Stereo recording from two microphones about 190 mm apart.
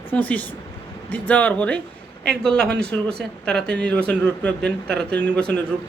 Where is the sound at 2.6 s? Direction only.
60° right (ahead or behind).